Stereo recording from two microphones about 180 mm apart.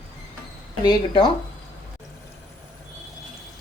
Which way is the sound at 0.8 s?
25° left (ahead or behind).